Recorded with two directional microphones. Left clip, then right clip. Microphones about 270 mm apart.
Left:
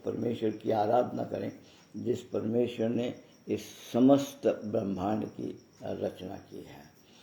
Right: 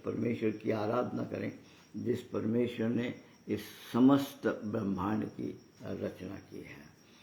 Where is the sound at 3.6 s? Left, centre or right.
Right.